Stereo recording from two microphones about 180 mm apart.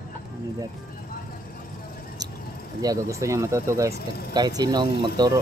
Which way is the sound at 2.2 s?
20° right (ahead or behind).